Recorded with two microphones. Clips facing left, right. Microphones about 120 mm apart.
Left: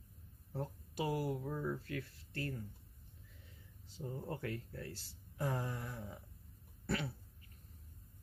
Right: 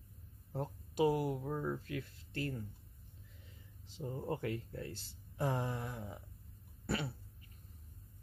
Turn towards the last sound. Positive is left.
turn(degrees=-15)  # may be behind; listen again after turning